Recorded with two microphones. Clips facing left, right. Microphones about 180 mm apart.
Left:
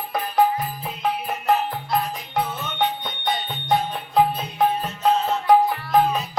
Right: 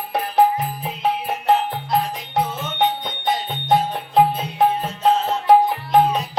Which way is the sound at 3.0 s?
25° right (ahead or behind).